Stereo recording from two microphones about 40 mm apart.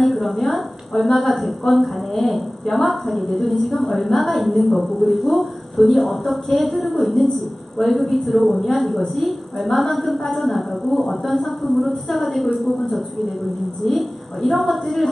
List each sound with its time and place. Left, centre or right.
0.0 s a woman's voice: centre
13.8 s a woman's voice: centre